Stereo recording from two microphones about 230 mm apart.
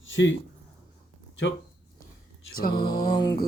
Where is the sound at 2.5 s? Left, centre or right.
Left.